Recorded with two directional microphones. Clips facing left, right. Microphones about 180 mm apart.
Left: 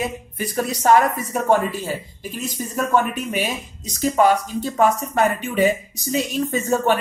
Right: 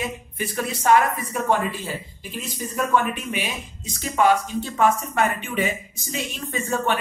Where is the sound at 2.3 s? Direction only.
45° left (ahead or behind).